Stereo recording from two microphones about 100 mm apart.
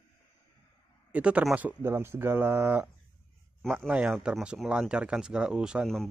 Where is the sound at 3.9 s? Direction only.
5° right (ahead or behind).